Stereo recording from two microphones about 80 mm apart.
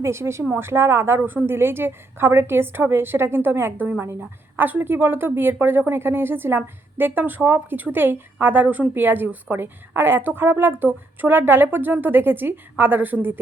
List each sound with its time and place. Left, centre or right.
0.0 s a woman's voice: right